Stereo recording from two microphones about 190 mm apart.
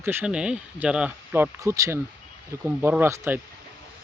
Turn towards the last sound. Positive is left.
turn(degrees=-15)  # may be behind; listen again after turning